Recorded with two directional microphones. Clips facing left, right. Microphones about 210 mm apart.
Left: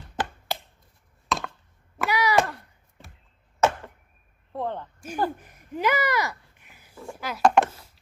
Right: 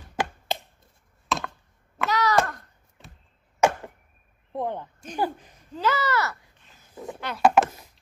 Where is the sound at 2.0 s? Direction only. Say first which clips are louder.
Even; 10° left (ahead or behind).